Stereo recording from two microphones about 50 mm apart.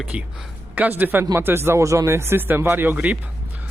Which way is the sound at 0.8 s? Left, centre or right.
Right.